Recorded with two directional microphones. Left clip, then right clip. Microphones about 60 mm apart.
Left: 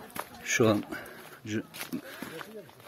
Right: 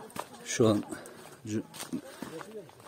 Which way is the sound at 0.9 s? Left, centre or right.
Right.